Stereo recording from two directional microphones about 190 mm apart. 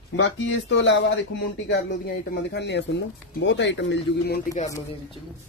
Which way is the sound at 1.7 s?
60° left (ahead or behind).